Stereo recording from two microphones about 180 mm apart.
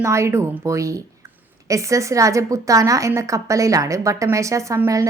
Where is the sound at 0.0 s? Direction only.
15° right (ahead or behind).